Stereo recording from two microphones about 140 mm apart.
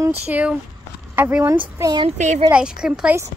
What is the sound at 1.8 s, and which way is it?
Speech, 25° right (ahead or behind).